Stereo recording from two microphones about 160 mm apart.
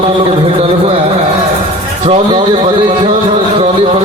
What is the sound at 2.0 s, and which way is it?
Speech, 30° right (ahead or behind).